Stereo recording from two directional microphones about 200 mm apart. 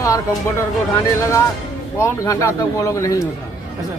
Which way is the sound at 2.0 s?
15° left (ahead or behind).